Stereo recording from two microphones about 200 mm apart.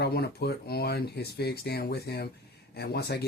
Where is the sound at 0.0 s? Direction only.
55° left (ahead or behind).